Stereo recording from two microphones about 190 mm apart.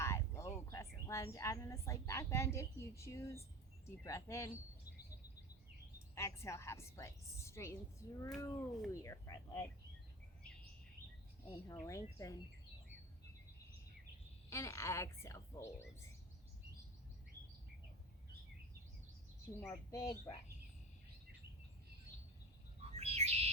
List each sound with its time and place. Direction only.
0.0 s a woman's voice: 15° left (ahead or behind)
6.1 s a woman's voice: 15° left (ahead or behind)
11.4 s a woman's voice: 20° left (ahead or behind)
14.5 s a woman's voice: 15° left (ahead or behind)
19.6 s a woman's voice: 15° left (ahead or behind)
22.8 s bird: 35° right (ahead or behind)